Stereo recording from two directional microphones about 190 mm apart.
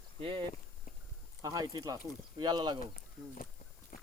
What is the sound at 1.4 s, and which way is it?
Speech, 20° right (ahead or behind).